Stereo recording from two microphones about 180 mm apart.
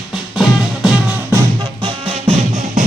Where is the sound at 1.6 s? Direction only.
25° right (ahead or behind); by 2.8 s 40° right (ahead or behind).